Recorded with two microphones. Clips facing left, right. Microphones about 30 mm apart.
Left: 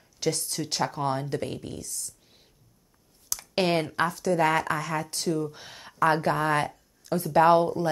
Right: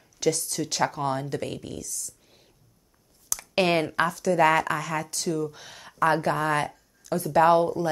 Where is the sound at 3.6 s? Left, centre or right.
Centre.